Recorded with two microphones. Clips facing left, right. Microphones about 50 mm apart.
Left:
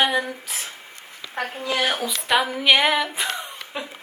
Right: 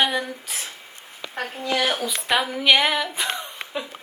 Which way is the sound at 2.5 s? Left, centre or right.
Centre.